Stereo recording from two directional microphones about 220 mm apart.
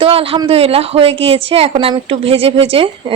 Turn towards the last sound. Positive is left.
turn(degrees=-25)  # may be behind; listen again after turning